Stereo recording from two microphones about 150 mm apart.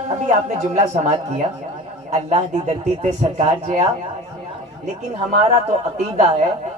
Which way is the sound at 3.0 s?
50° right (ahead or behind).